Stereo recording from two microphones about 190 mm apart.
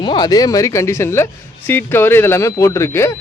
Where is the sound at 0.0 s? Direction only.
25° left (ahead or behind).